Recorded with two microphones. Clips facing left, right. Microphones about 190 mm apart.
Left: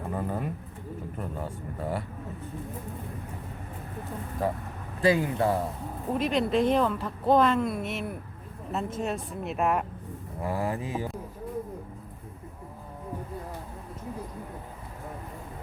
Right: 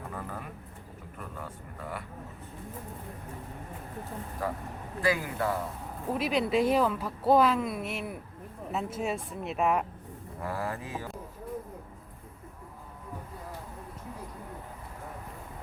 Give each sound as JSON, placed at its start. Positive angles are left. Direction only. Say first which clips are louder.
{"t": 0.1, "sound": "speech", "louder": "left 8 dB", "side_deg": 25}
{"t": 4.4, "sound": "speech", "louder": "left 5 dB", "side_deg": 25}
{"t": 6.1, "sound": "speech", "louder": "left 2 dB", "side_deg": -5}
{"t": 10.4, "sound": "speech", "louder": "left 5 dB", "side_deg": 15}